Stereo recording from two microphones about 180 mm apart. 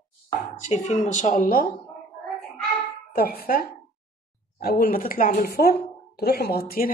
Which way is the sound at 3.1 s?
60° left (ahead or behind).